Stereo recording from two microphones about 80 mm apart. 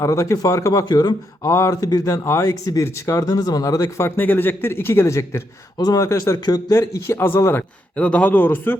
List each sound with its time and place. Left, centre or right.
0.0 s speech: left
0.9 s speech: left
1.4 s speech: left
2.2 s speech: left
4.2 s speech: left
5.7 s speech: left
6.0 s speech: left
7.9 s a man's voice: centre